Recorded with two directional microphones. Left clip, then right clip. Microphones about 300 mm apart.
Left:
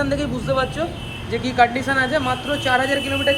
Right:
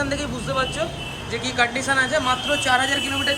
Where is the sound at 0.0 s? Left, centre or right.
Centre.